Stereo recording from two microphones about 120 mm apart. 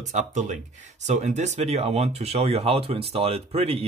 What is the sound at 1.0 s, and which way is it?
Speech, 75° right (ahead or behind).